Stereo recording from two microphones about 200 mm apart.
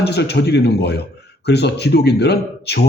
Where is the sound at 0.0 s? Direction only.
55° left (ahead or behind).